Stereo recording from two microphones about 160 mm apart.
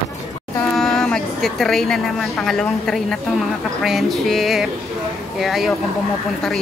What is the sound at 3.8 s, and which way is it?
Music, centre (ahead or behind).